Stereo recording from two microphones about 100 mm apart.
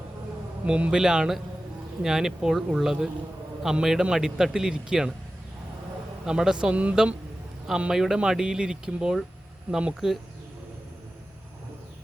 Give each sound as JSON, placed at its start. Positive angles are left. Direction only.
{"t": 0.6, "sound": "a man's voice", "side_deg": -10}
{"t": 6.2, "sound": "a man's voice", "side_deg": -5}